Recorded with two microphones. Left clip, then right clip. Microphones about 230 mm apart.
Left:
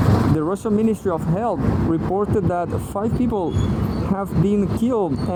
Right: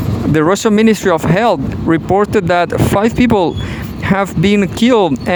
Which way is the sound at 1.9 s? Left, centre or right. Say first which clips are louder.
Right 11 dB; right.